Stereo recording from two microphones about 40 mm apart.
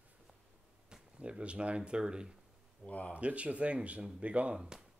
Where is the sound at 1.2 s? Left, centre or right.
Right.